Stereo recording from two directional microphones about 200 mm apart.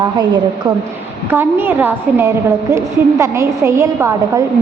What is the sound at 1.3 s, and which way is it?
A woman's voice, 10° right (ahead or behind).